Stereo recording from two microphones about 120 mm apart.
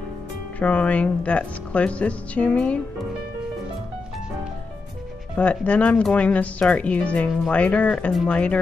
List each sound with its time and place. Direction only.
0.6 s speech: 10° left (ahead or behind)
5.3 s speech: 10° left (ahead or behind)